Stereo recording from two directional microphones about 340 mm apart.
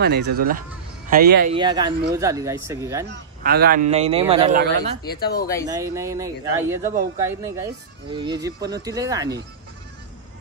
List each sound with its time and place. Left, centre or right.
0.0 s a man's voice: right
1.6 s speech: centre
3.1 s a man's voice: right
5.0 s speech: left
5.7 s speech: centre